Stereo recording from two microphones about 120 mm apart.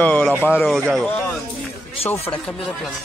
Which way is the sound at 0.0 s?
10° left (ahead or behind).